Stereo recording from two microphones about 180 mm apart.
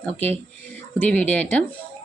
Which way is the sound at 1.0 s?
5° left (ahead or behind).